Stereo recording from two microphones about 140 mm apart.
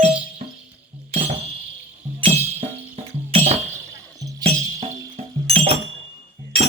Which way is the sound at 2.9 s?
50° right (ahead or behind).